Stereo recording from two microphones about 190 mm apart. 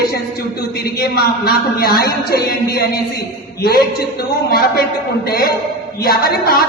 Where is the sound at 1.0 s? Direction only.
55° left (ahead or behind).